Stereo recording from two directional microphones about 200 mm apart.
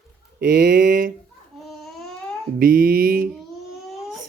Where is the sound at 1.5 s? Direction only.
Centre (ahead or behind).